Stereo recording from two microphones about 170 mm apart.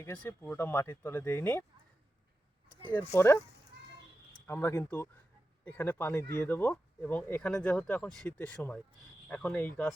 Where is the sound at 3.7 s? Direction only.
80° right.